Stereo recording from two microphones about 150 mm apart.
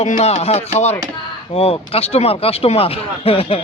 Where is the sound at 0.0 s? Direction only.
45° left (ahead or behind).